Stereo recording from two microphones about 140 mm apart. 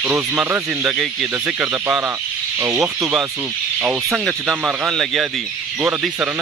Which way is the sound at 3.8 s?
Centre (ahead or behind).